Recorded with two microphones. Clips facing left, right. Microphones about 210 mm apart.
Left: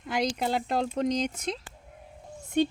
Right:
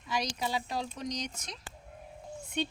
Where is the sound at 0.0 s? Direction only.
55° left (ahead or behind).